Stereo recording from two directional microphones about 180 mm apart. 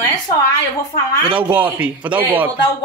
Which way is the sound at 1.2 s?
10° right (ahead or behind).